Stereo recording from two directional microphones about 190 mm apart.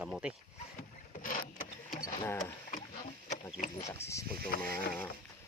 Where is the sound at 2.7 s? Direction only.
45° left (ahead or behind).